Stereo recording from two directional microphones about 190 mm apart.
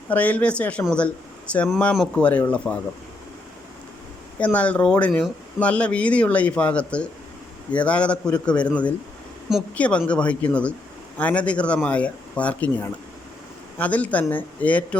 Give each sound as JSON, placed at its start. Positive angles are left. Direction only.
{"t": 0.1, "sound": "speech", "side_deg": 10}
{"t": 4.4, "sound": "speech", "side_deg": 5}